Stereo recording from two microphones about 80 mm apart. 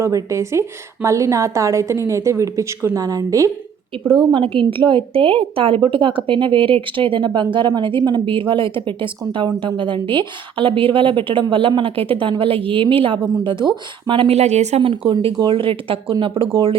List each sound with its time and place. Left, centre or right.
0.0 s a woman's voice: right
4.0 s a woman's voice: centre
4.3 s a woman's voice: right
13.4 s a woman's voice: right